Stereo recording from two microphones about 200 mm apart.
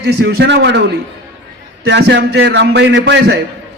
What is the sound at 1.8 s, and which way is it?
A man's voice, 60° right (ahead or behind).